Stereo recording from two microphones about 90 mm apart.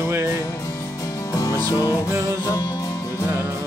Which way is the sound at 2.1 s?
35° right (ahead or behind).